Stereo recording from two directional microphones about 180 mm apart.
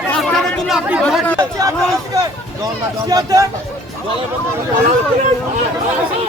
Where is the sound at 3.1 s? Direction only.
20° right (ahead or behind).